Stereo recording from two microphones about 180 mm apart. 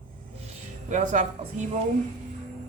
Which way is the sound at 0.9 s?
45° right (ahead or behind).